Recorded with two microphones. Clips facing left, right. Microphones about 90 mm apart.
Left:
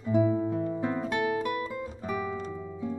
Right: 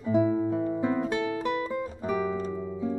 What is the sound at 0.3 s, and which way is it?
Music, 15° right (ahead or behind).